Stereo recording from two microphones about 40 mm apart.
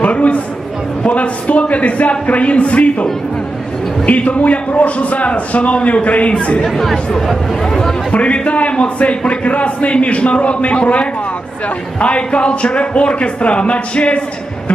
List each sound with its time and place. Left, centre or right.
0.0 s a sound: left
1.0 s a man's voice: left
6.6 s speech: centre
8.1 s a man's voice: left